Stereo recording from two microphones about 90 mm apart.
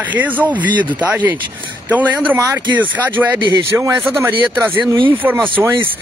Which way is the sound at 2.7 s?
20° right (ahead or behind).